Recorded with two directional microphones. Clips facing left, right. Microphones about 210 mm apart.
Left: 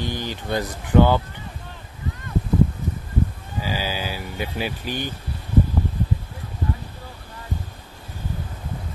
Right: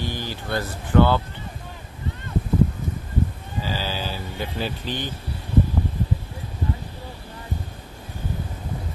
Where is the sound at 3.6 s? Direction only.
10° left (ahead or behind).